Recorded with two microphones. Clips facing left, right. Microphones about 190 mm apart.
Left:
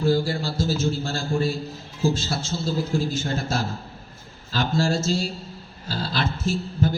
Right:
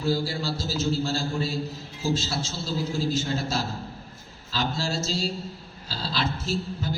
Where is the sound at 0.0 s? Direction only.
55° left (ahead or behind).